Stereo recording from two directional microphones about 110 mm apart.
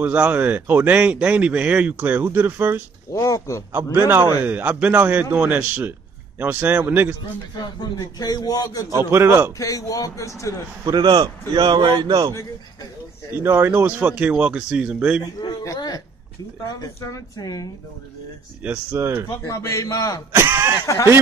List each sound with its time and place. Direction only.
0.0 s speech: 15° right (ahead or behind)
3.1 s speech: 30° left (ahead or behind)
4.5 s speech: 15° right (ahead or behind)
8.2 s speech: 35° left (ahead or behind)
8.9 s speech: 25° right (ahead or behind)
9.6 s speech: 30° left (ahead or behind)
10.9 s a man's voice: 40° right (ahead or behind)
13.4 s speech: 20° right (ahead or behind)
15.6 s speech: 30° left (ahead or behind)
18.6 s speech: 15° right (ahead or behind)
19.4 s speech: 30° left (ahead or behind)
20.3 s speech: 20° right (ahead or behind)
20.8 s speech: 30° left (ahead or behind)